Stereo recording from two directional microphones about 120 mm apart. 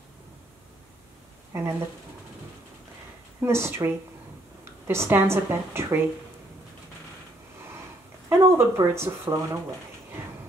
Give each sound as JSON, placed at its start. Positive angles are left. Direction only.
{"t": 1.5, "sound": "speech", "side_deg": -25}
{"t": 3.3, "sound": "speech", "side_deg": -20}
{"t": 8.3, "sound": "speech", "side_deg": -20}